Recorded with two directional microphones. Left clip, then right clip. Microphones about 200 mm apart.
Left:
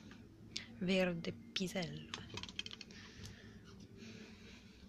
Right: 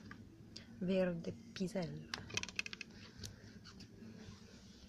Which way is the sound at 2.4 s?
25° right (ahead or behind).